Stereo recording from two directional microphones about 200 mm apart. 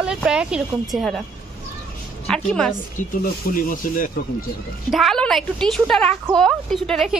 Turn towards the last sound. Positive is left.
turn(degrees=0)  # may be behind; listen again after turning